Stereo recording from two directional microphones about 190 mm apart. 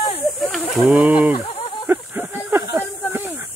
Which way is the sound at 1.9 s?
10° right (ahead or behind).